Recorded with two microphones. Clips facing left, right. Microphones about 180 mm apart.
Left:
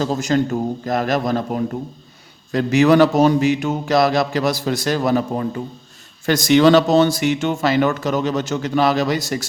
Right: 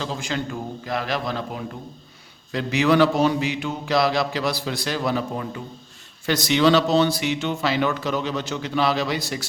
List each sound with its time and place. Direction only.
0.0 s speech: 40° left (ahead or behind)